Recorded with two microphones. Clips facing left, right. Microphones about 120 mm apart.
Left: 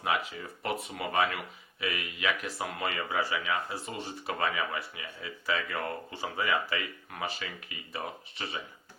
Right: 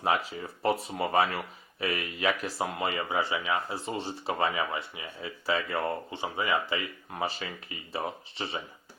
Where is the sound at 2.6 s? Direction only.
25° right (ahead or behind).